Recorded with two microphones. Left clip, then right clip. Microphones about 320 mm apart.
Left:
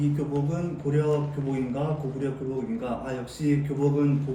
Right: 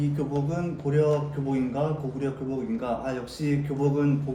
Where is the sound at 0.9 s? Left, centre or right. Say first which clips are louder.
Right 2 dB; centre.